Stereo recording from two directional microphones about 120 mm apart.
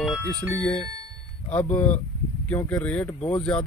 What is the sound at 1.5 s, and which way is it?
Speech, 15° left (ahead or behind).